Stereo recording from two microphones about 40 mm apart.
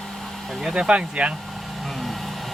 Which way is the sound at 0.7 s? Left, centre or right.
Right.